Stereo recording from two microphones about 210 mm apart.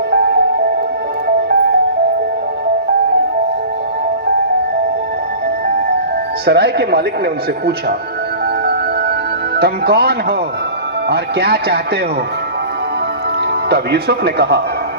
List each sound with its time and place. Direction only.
0.1 s music: 50° right (ahead or behind)
6.4 s speech: 50° right (ahead or behind)
9.6 s speech: 50° right (ahead or behind)
13.7 s speech: 50° right (ahead or behind)